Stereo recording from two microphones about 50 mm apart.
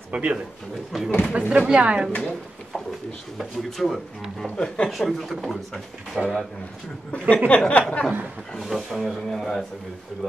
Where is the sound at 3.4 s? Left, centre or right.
Centre.